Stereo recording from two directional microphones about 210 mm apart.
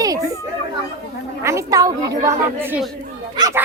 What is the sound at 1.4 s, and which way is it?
A woman's voice, 15° right (ahead or behind).